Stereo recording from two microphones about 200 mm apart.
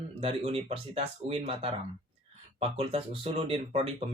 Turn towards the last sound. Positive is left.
turn(degrees=-30)  # may be behind; listen again after turning